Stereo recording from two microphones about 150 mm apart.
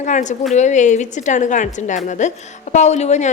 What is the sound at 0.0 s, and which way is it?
A woman's voice, 55° left (ahead or behind).